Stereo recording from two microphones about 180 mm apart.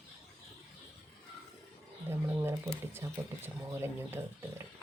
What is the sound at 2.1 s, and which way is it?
Speech, 15° right (ahead or behind).